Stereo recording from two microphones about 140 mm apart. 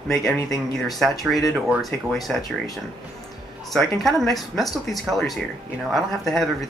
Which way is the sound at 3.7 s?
Centre (ahead or behind).